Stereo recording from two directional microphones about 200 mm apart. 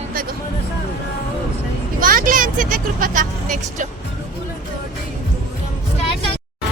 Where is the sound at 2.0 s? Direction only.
45° right (ahead or behind).